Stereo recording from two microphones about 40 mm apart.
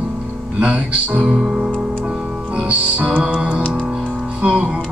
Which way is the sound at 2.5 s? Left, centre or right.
Right.